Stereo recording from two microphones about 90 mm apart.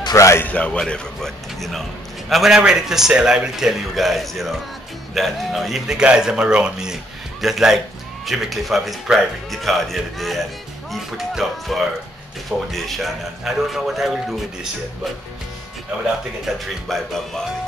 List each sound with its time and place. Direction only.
0.1 s speech: 35° left (ahead or behind)
0.5 s a man's voice: 10° left (ahead or behind); by 14.7 s 5° right (ahead or behind)
16.5 s a man's voice: centre (ahead or behind)